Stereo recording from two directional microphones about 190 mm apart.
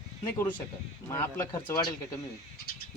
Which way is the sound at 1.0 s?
15° left (ahead or behind).